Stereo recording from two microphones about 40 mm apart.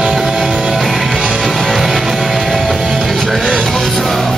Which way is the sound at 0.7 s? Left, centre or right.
Centre.